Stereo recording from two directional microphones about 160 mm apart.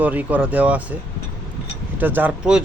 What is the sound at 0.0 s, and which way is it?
Speech, 10° right (ahead or behind).